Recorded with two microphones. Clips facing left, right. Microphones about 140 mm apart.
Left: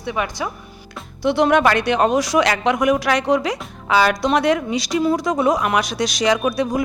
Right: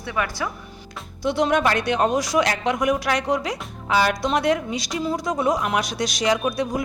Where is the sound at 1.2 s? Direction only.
65° left (ahead or behind).